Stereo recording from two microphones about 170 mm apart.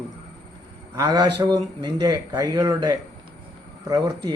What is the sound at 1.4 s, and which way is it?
Speech, 20° right (ahead or behind).